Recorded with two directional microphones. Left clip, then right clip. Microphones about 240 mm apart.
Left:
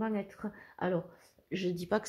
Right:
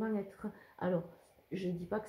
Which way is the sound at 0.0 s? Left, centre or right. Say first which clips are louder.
Left 2 dB; left.